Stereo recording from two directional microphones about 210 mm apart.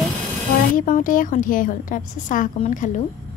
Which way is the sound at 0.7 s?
40° left (ahead or behind).